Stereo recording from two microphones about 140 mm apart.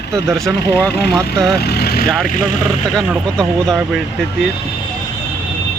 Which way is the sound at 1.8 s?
90° left.